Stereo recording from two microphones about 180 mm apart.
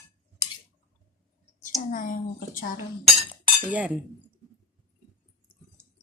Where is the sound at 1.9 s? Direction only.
50° left (ahead or behind).